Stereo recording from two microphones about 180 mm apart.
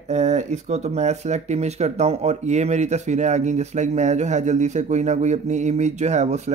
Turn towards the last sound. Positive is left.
turn(degrees=-40)  # may be behind; listen again after turning